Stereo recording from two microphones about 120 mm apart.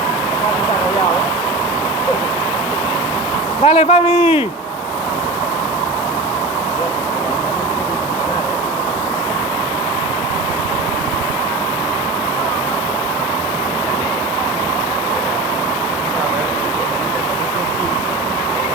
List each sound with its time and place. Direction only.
3.6 s a man's voice: 55° left (ahead or behind)